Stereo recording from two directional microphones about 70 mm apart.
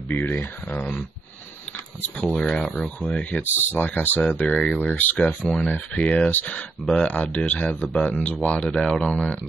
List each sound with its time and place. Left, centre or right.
0.1 s speech: left
2.3 s speech: centre; by 5.2 s left
5.4 s speech: centre